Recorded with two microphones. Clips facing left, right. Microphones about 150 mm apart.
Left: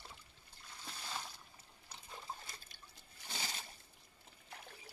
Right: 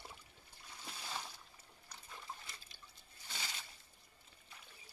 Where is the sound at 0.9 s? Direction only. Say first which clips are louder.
Even; 5° right (ahead or behind).